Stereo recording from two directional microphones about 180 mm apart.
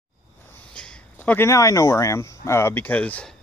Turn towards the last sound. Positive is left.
turn(degrees=10)  # may be behind; listen again after turning